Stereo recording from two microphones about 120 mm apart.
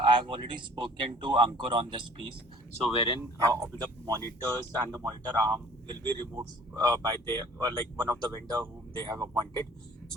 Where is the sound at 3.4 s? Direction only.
25° right (ahead or behind).